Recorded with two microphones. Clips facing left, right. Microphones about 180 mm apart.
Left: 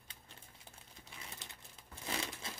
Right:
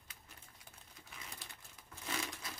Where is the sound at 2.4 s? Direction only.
25° left (ahead or behind).